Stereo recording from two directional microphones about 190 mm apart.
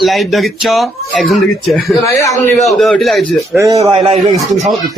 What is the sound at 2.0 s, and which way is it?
Speech, 15° left (ahead or behind).